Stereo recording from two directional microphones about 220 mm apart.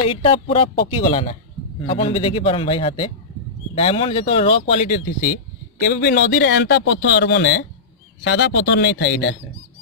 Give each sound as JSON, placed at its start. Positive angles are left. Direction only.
{"t": 0.0, "sound": "speech", "side_deg": 25}